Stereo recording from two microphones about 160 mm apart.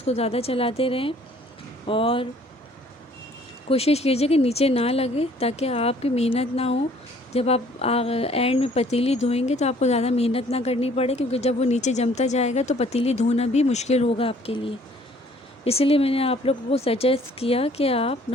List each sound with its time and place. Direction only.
0.0 s speech: 40° left (ahead or behind)
3.7 s speech: 40° left (ahead or behind)